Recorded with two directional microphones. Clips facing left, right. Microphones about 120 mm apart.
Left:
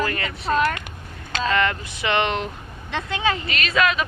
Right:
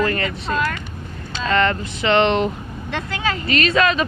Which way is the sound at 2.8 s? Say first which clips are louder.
Left 1 dB; 15° left (ahead or behind).